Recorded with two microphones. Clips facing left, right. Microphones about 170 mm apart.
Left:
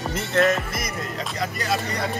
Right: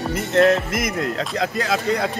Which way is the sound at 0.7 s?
90° right.